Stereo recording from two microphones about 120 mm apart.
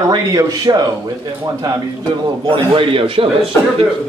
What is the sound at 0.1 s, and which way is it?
Speech, 35° right (ahead or behind).